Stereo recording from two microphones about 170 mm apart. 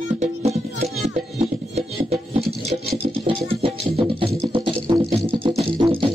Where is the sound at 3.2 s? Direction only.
35° right (ahead or behind).